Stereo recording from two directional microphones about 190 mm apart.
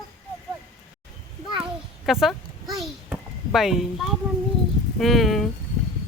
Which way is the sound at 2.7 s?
Centre (ahead or behind).